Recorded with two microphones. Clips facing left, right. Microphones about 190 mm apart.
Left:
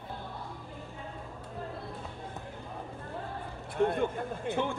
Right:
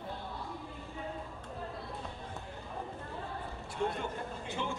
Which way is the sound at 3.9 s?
55° left (ahead or behind).